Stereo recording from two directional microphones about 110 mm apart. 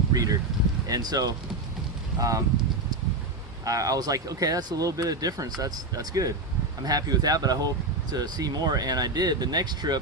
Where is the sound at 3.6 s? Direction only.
30° right (ahead or behind).